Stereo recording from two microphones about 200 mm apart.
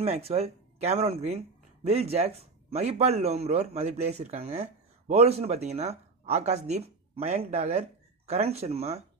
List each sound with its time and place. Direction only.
0.0 s a man's voice: 30° right (ahead or behind)